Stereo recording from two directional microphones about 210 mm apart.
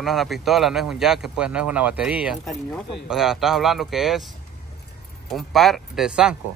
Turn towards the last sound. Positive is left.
turn(degrees=-5)  # may be behind; listen again after turning